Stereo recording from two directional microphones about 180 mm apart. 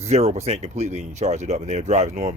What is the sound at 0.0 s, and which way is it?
Speech, 35° right (ahead or behind).